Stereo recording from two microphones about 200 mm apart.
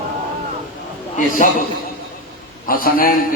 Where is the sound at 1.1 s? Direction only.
40° left (ahead or behind).